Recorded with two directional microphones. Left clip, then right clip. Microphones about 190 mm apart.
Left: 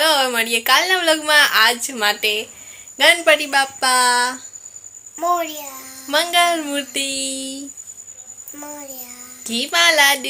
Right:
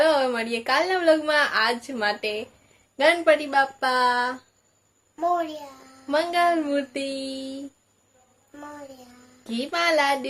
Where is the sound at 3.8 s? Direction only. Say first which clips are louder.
Left 6 dB; 25° left (ahead or behind).